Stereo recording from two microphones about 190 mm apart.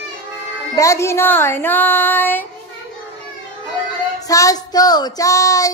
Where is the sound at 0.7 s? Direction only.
15° left (ahead or behind).